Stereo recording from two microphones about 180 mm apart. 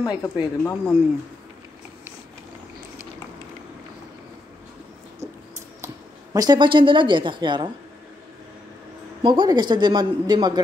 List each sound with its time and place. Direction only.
0.0 s speech: 20° left (ahead or behind)
6.3 s a woman's voice: 20° right (ahead or behind)
9.2 s a woman's voice: 25° right (ahead or behind)